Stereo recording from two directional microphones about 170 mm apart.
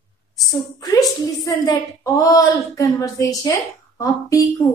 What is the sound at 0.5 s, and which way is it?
A woman's voice, 20° left (ahead or behind).